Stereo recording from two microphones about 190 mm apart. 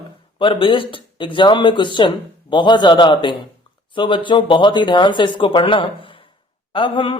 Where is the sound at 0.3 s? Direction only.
25° left (ahead or behind).